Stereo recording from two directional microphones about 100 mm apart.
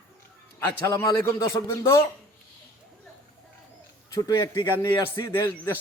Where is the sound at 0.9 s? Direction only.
40° left (ahead or behind).